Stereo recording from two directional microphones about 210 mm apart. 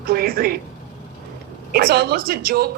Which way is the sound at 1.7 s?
45° right (ahead or behind).